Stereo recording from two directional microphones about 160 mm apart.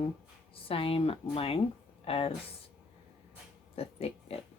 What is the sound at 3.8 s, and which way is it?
Pig, 40° left (ahead or behind).